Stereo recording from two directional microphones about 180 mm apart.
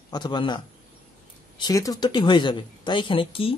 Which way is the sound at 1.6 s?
20° left (ahead or behind).